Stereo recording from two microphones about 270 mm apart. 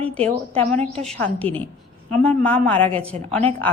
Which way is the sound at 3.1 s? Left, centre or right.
Right.